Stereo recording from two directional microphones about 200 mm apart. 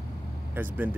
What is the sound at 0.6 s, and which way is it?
Speech, 10° right (ahead or behind).